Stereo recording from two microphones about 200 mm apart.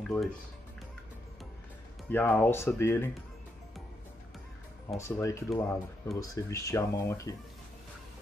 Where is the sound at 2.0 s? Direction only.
10° left (ahead or behind).